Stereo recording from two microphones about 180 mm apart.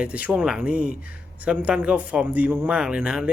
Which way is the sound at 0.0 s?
5° right (ahead or behind).